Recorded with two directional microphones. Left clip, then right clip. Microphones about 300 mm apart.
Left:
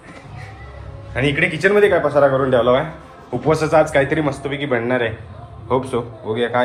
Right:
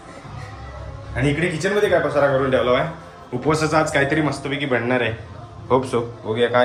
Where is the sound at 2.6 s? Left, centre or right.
Centre.